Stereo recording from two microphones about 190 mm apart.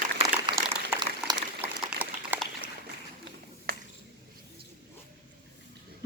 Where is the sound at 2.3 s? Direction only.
10° right (ahead or behind).